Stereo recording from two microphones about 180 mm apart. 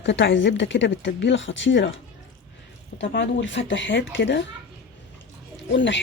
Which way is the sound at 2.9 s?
85° left.